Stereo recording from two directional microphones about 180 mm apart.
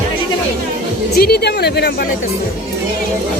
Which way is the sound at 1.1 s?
60° left (ahead or behind).